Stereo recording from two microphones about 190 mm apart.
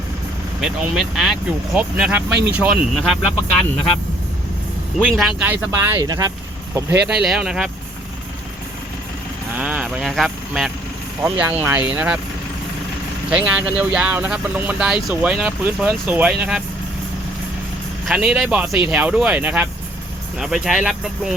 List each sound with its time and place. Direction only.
0.6 s speech: 5° right (ahead or behind)
5.0 s speech: centre (ahead or behind); by 6.3 s 20° right (ahead or behind)
7.1 s speech: 5° right (ahead or behind)
9.6 s speech: 5° right (ahead or behind)
13.3 s speech: 5° right (ahead or behind)
18.0 s speech: 5° right (ahead or behind)